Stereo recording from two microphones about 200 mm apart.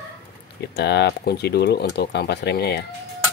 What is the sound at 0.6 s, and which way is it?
Speech, 55° left (ahead or behind).